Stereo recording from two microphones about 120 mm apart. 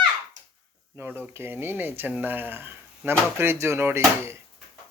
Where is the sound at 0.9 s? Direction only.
20° right (ahead or behind).